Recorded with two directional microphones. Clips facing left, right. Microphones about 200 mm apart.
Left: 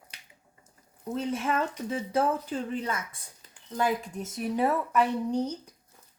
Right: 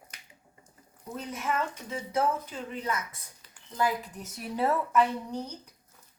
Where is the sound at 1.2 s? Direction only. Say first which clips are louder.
Left 3 dB; 30° left (ahead or behind).